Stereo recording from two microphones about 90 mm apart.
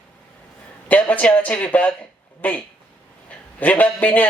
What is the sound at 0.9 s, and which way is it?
Speech, 20° left (ahead or behind).